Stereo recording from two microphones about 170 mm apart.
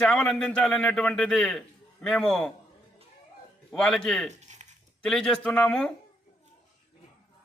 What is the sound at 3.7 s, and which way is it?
Speech, centre (ahead or behind).